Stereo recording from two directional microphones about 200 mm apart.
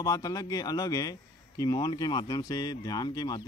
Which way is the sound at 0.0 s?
15° left (ahead or behind).